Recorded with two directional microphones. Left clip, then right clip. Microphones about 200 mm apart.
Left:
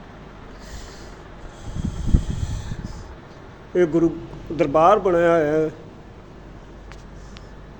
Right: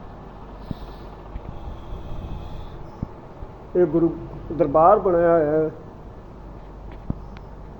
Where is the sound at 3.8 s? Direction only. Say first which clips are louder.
Left 1 dB; 30° left (ahead or behind).